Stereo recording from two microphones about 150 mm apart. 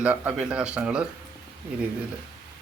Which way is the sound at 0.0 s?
10° right (ahead or behind).